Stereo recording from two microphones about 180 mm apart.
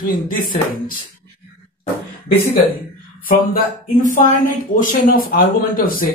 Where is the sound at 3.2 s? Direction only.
50° left (ahead or behind).